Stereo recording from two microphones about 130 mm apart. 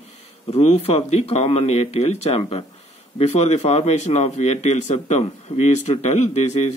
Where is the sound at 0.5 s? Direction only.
55° left (ahead or behind).